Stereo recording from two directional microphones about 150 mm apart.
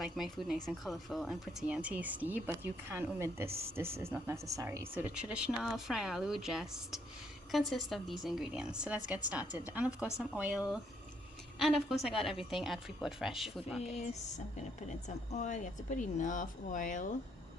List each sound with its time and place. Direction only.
0.0 s a woman's voice: centre (ahead or behind)
13.9 s speech: 50° left (ahead or behind)